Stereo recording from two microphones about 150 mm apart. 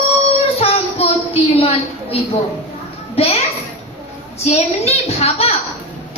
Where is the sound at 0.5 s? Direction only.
40° left (ahead or behind).